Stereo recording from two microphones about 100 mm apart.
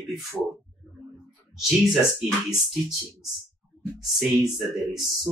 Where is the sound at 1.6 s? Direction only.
Centre (ahead or behind).